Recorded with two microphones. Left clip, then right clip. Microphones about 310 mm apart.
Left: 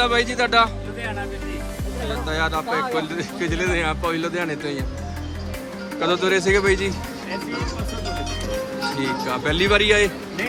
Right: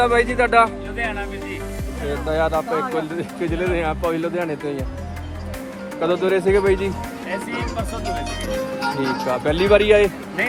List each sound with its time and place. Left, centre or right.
0.0 s speech: centre
2.2 s speech: centre
6.0 s speech: centre
7.5 s speech: right
9.3 s speech: centre